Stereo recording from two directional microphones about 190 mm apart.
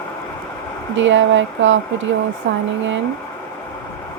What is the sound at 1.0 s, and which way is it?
Speech, 80° right.